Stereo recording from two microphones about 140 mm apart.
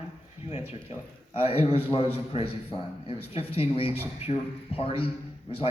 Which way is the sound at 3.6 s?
40° left (ahead or behind).